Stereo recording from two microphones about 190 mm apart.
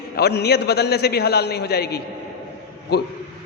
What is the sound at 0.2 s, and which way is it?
A man's voice, 60° left (ahead or behind).